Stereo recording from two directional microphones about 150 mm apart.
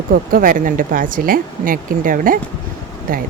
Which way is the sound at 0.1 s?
70° right (ahead or behind).